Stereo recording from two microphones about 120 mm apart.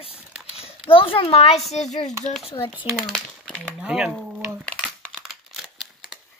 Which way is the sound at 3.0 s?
5° left (ahead or behind).